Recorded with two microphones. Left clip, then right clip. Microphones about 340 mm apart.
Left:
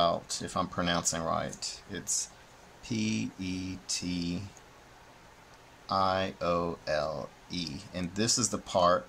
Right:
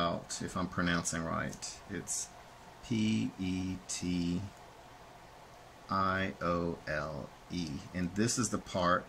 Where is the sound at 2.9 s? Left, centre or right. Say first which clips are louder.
Left 1 dB; centre.